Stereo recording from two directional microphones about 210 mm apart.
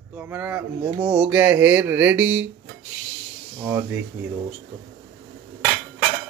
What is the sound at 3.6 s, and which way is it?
Speech, 10° right (ahead or behind).